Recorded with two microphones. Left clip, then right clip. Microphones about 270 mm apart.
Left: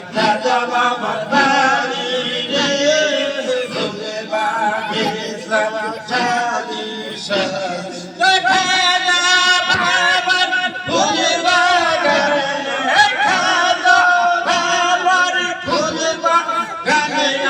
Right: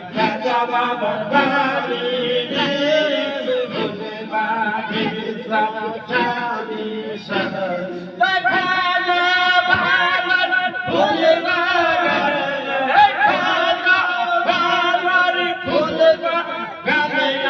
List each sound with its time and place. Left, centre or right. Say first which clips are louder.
0.2 s chant: left 3 dB; left
1.4 s a sound: left 3 dB; left
2.6 s music: left 4 dB; left
8.2 s music: left 3 dB; left
15.7 s a sound: right 5 dB; left
16.8 s music: left 1 dB; left